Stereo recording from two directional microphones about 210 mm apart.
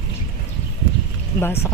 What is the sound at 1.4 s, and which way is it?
Speech, 10° left (ahead or behind).